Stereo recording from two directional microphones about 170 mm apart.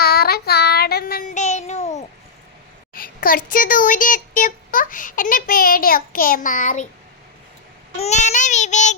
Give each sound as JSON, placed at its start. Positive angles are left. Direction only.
{"t": 0.0, "sound": "child singing", "side_deg": 65}
{"t": 2.9, "sound": "speech", "side_deg": 55}
{"t": 7.9, "sound": "child singing", "side_deg": 40}